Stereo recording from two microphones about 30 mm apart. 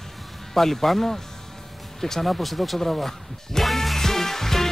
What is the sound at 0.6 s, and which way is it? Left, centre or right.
Speech, centre.